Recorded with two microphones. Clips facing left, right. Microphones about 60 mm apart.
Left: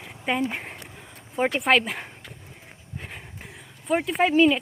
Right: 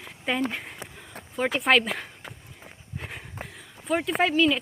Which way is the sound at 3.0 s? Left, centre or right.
Centre.